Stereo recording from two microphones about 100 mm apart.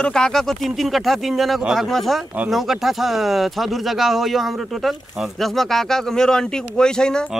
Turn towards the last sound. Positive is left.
turn(degrees=5)  # may be behind; listen again after turning